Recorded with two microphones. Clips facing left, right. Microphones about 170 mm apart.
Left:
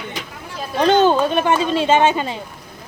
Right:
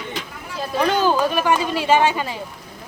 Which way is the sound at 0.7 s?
25° left (ahead or behind).